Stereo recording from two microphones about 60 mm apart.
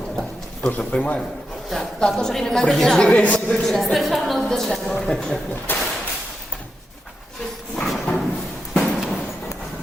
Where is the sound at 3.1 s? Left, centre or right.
Left.